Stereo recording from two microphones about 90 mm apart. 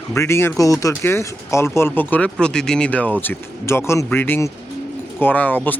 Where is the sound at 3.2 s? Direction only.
25° left (ahead or behind).